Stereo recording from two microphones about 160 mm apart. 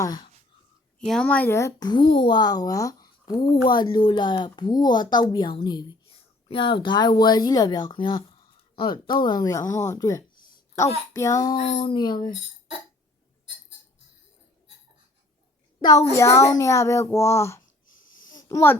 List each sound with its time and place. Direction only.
0.0 s speech: 25° left (ahead or behind)
0.9 s speech: 5° left (ahead or behind); by 11.5 s 20° left (ahead or behind)
11.5 s speech: 40° left (ahead or behind)
15.8 s a woman's voice: 25° left (ahead or behind)
17.9 s a sound: 55° left (ahead or behind)
18.4 s a child's voice: 15° left (ahead or behind)